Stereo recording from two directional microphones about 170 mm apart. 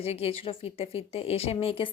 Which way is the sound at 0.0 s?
35° left (ahead or behind).